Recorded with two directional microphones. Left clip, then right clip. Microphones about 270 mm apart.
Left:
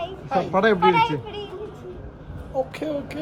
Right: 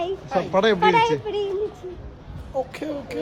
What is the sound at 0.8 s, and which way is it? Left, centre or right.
Speech, right.